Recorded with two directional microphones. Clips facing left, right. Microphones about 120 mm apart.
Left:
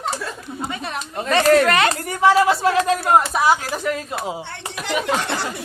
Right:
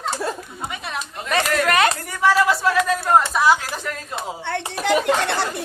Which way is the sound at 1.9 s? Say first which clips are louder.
Left 3 dB; 20° left (ahead or behind).